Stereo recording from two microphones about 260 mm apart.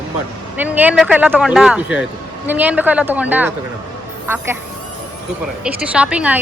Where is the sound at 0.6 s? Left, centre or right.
Centre.